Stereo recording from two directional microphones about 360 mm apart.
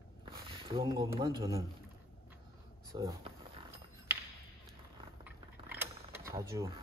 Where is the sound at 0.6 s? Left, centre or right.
Centre.